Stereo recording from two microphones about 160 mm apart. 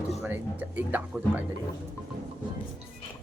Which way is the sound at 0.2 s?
10° right (ahead or behind).